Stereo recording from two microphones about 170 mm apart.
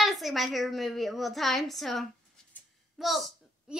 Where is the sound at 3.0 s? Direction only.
Centre (ahead or behind).